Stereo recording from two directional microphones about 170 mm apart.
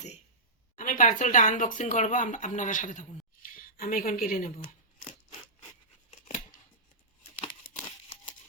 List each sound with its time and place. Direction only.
0.8 s speech: 50° left (ahead or behind)
6.1 s scissors: 40° left (ahead or behind)